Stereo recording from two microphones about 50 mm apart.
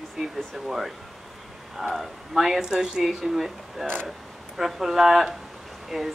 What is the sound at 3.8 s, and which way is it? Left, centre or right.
Speech, centre.